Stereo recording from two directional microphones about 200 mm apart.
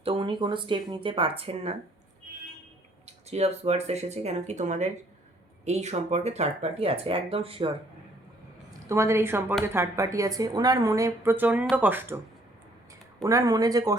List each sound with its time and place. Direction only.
0.0 s speech: 25° right (ahead or behind)
3.2 s speech: 30° right (ahead or behind)
8.9 s a woman's voice: 15° right (ahead or behind)
13.2 s a woman's voice: 15° right (ahead or behind)